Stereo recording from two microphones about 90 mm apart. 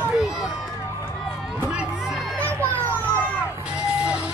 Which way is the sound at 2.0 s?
Centre (ahead or behind).